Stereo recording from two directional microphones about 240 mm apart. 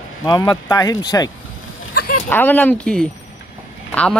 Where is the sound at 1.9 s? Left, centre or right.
Left.